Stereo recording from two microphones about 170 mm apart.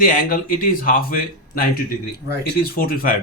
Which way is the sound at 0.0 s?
55° left (ahead or behind).